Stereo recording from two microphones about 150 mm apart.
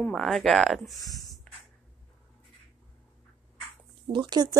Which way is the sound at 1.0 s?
25° left (ahead or behind).